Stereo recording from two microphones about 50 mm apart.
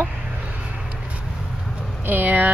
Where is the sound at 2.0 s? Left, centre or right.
Right.